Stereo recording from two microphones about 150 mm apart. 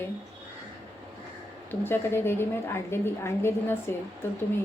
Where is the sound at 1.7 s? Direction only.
15° left (ahead or behind).